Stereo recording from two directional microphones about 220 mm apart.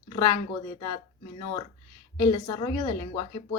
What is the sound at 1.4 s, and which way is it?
A woman's voice, 20° left (ahead or behind).